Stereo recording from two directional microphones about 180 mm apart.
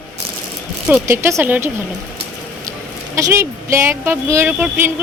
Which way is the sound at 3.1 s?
15° right (ahead or behind).